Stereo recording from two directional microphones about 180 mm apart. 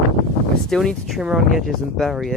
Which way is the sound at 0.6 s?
Centre (ahead or behind).